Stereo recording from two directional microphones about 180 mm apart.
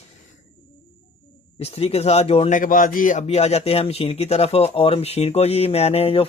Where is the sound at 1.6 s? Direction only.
35° left (ahead or behind).